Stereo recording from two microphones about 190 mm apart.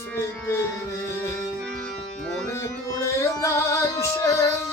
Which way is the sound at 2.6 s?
15° left (ahead or behind).